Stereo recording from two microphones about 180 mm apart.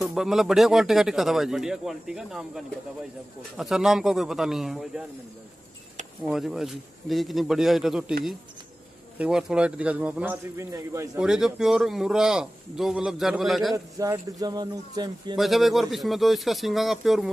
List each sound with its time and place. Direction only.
0.0 s a man's voice: centre (ahead or behind)
6.2 s a man's voice: centre (ahead or behind)
9.2 s a man's voice: 5° right (ahead or behind)
11.1 s a man's voice: 5° right (ahead or behind)
13.9 s speech: 20° right (ahead or behind)
15.3 s a man's voice: centre (ahead or behind)